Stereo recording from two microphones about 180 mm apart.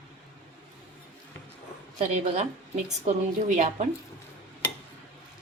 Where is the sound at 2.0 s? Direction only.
35° right (ahead or behind).